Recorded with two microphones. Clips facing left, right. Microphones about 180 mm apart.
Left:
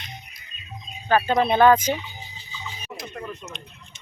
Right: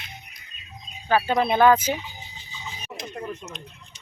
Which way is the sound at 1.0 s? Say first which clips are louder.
Left 1 dB; 5° right (ahead or behind).